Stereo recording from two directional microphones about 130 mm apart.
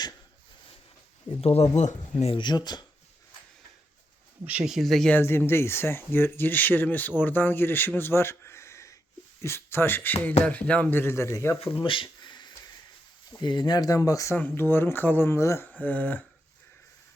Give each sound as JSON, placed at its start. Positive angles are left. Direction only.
{"t": 1.4, "sound": "speech", "side_deg": 50}
{"t": 1.7, "sound": "speech", "side_deg": 65}
{"t": 2.3, "sound": "speech", "side_deg": 35}
{"t": 4.4, "sound": "speech", "side_deg": -10}
{"t": 5.1, "sound": "speech", "side_deg": 15}
{"t": 11.6, "sound": "speech", "side_deg": 40}
{"t": 12.0, "sound": "a sound", "side_deg": 35}
{"t": 13.4, "sound": "speech", "side_deg": 35}